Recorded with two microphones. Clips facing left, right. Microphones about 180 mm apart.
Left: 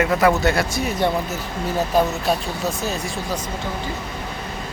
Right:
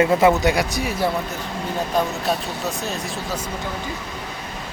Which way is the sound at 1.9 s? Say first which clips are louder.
Left 2 dB; centre (ahead or behind).